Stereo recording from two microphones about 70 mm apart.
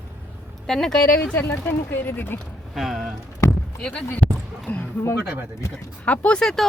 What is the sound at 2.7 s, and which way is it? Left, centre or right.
Speech, centre.